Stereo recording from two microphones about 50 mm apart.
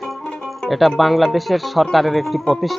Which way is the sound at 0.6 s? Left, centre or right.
Centre.